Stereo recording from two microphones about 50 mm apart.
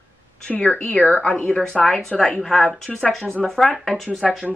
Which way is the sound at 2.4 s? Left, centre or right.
Centre.